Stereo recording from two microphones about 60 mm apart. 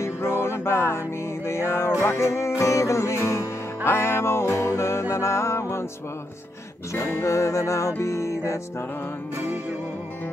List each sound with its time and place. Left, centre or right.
0.0 s music: left
7.2 s music: left